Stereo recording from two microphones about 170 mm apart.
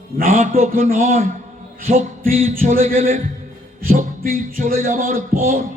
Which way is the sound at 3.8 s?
55° right (ahead or behind).